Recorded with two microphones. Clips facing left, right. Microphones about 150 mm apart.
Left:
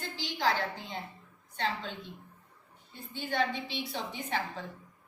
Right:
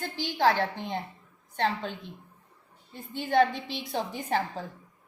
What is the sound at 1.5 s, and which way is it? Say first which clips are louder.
Speech: right 5 dB; 50° right (ahead or behind).